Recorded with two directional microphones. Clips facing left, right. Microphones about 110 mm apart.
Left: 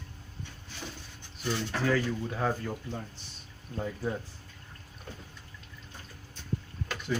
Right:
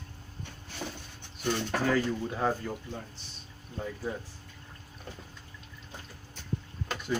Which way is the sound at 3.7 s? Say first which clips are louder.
Left 2 dB; 15° left (ahead or behind).